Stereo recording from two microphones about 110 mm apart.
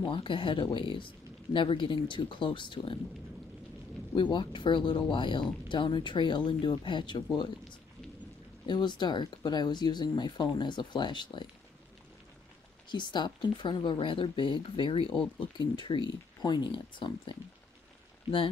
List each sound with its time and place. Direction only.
0.0 s speech: 50° left (ahead or behind)
4.1 s speech: 45° left (ahead or behind)
8.6 s speech: 40° left (ahead or behind)
12.9 s speech: 45° left (ahead or behind)